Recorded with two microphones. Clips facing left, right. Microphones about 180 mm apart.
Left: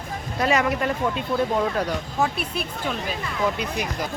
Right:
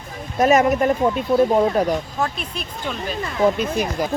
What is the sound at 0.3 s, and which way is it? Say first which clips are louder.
Speech: right 7 dB; 25° right (ahead or behind).